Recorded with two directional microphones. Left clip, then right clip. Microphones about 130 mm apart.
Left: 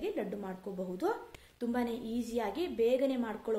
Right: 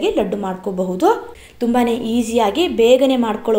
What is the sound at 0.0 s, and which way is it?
A woman's voice, 10° right (ahead or behind).